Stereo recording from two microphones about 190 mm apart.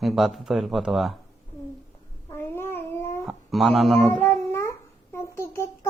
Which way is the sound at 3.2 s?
Centre (ahead or behind).